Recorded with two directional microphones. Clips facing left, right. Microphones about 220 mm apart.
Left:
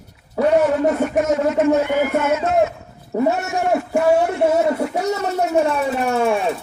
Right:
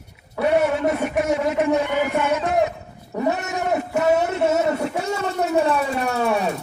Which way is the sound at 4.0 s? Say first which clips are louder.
Left 3 dB; 20° right (ahead or behind).